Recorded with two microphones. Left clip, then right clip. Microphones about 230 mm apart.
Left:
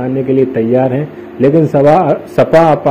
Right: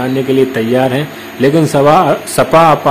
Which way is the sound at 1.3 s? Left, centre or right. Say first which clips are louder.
Left 1 dB; centre.